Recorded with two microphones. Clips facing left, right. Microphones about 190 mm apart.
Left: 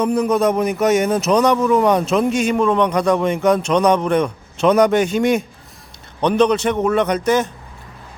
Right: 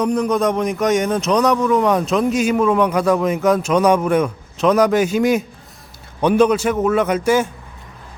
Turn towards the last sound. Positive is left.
turn(degrees=-10)  # may be behind; listen again after turning